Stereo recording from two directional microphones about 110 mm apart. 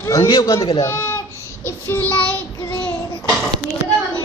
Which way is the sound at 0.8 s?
25° left (ahead or behind).